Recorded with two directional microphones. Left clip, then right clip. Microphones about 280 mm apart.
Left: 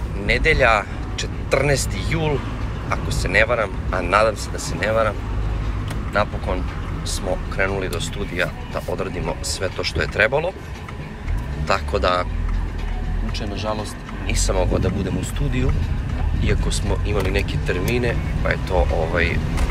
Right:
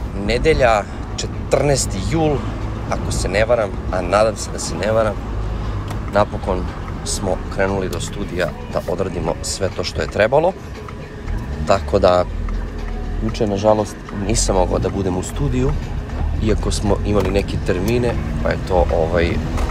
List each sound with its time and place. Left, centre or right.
0.3 s speech: centre
6.1 s speech: centre
11.6 s speech: centre
13.4 s speech: right